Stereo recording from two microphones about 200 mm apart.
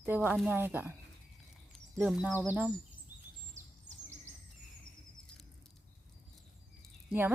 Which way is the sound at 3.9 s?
35° right (ahead or behind).